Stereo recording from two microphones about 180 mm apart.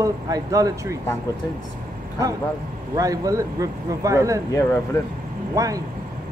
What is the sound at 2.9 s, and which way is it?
Speech, 20° right (ahead or behind).